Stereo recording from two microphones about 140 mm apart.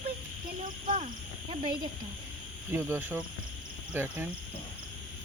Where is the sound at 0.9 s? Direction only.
45° right (ahead or behind).